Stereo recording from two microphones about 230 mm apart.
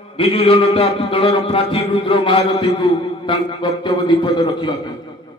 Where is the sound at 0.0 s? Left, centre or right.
Left.